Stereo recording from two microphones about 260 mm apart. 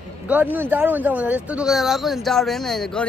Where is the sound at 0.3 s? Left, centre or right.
Centre.